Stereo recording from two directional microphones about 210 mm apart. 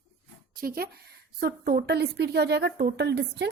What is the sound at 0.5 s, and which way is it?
A woman's voice, 45° right (ahead or behind).